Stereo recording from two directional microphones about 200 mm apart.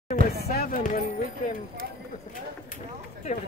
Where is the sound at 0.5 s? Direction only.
50° left (ahead or behind).